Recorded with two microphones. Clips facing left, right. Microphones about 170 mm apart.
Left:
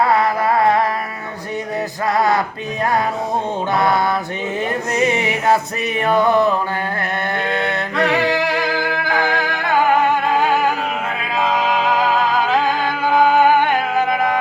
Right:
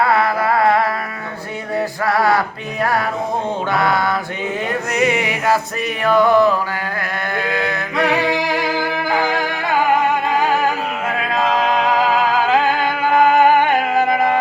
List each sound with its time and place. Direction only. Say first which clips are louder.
2.0 s music: even; 20° left (ahead or behind)
3.7 s male singing: left 1 dB; 20° left (ahead or behind)
7.3 s a sound: right 1 dB; 25° left (ahead or behind)
9.0 s music: right 1 dB; 10° right (ahead or behind)